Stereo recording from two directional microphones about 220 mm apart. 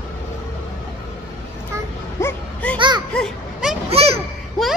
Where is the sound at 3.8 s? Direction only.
25° right (ahead or behind).